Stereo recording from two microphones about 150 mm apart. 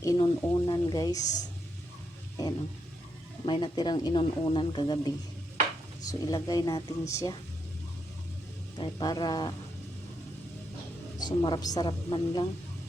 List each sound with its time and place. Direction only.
0.0 s a sound: 25° left (ahead or behind)
1.2 s speech: 55° left (ahead or behind)
3.4 s speech: 30° left (ahead or behind)
8.8 s speech: 30° left (ahead or behind)
11.2 s speech: 30° left (ahead or behind)